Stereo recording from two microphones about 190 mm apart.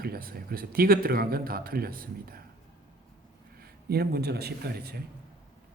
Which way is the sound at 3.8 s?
55° right (ahead or behind).